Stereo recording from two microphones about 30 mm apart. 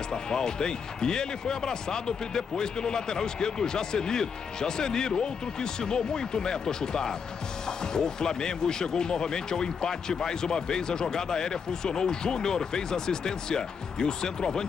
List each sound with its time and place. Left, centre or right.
0.1 s speech: left